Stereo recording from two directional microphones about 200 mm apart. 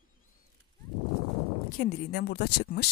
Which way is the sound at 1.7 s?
50° left (ahead or behind).